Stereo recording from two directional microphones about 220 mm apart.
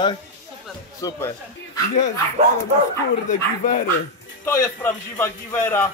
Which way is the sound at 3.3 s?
35° left (ahead or behind).